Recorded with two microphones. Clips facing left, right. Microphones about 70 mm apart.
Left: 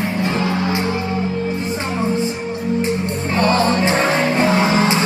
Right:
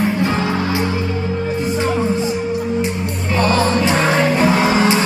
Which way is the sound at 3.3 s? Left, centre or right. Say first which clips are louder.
Right 1 dB; left.